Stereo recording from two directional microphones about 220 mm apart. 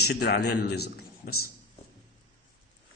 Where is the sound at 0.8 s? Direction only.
80° left.